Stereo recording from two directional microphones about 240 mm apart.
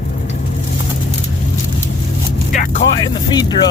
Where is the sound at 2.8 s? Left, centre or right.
Centre.